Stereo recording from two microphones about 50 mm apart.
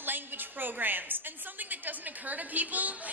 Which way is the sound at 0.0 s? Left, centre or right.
Right.